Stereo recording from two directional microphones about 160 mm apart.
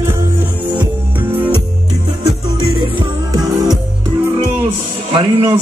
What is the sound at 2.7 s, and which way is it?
Music, 30° right (ahead or behind).